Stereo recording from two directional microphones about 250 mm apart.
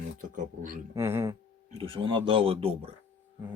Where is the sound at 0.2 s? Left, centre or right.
Right.